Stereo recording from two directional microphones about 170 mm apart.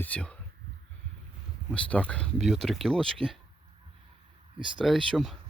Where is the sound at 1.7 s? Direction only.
5° left (ahead or behind).